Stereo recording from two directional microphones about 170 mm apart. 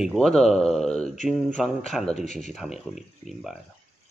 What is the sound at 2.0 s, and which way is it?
Speech, 40° left (ahead or behind).